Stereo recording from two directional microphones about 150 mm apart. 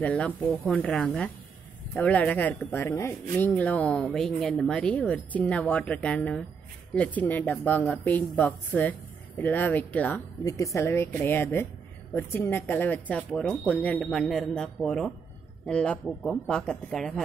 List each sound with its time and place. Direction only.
0.0 s speech: 10° left (ahead or behind)
10.4 s speech: 20° left (ahead or behind); by 17.2 s centre (ahead or behind)